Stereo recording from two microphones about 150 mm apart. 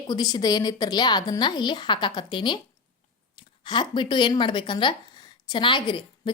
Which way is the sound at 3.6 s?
30° left (ahead or behind).